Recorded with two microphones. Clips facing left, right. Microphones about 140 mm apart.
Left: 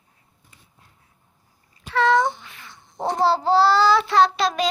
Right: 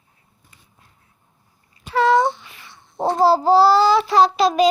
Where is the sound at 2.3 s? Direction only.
45° left (ahead or behind).